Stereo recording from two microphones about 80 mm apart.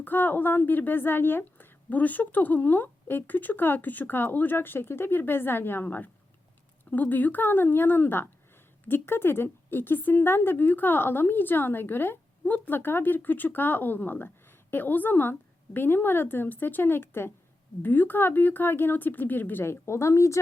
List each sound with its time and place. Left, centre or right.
0.0 s speech: left